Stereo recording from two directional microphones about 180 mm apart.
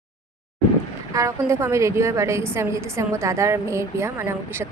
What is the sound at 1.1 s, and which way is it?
A woman's voice, 15° right (ahead or behind).